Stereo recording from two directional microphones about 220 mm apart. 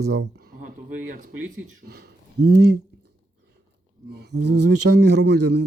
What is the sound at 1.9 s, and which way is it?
Speech, 45° right (ahead or behind).